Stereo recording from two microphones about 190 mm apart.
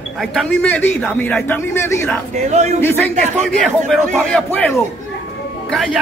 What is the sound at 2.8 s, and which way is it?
A man's voice, 10° left (ahead or behind).